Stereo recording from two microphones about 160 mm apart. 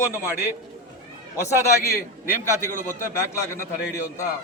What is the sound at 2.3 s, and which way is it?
A man's voice, 15° left (ahead or behind).